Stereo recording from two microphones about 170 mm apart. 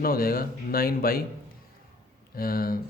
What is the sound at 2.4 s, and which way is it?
Speech, 60° left (ahead or behind).